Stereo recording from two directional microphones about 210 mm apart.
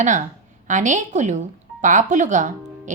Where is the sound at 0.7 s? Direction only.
35° right (ahead or behind).